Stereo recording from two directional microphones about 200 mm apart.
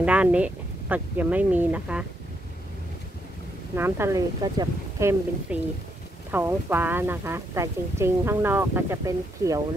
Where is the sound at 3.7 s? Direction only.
10° right (ahead or behind).